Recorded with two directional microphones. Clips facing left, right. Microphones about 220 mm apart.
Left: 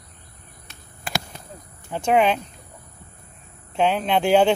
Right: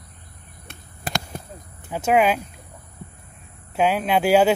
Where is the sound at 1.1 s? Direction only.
40° right (ahead or behind).